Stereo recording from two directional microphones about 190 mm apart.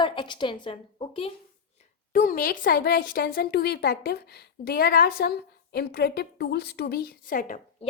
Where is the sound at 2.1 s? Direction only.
50° left (ahead or behind).